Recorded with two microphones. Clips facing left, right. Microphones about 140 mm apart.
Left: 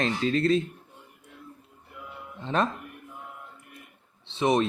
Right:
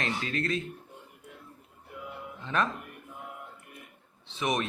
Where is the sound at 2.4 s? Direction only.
30° left (ahead or behind).